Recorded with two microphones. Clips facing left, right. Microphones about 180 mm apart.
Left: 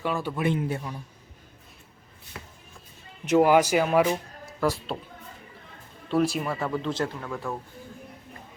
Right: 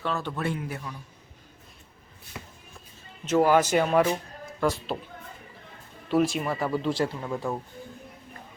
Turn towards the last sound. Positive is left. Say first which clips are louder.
# right 2 dB
turn(degrees=-15)  # may be behind; listen again after turning